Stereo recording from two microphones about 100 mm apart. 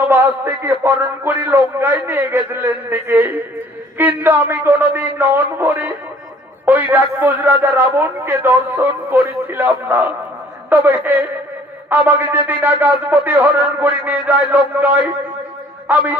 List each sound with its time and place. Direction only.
0.1 s a man's voice: 25° right (ahead or behind)